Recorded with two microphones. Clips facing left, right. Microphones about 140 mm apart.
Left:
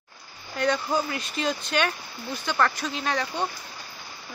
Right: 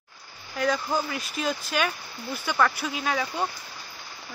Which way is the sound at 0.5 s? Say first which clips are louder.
Left 1 dB; 5° right (ahead or behind).